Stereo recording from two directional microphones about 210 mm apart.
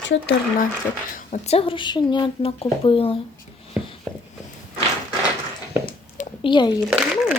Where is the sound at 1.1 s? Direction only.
35° left (ahead or behind).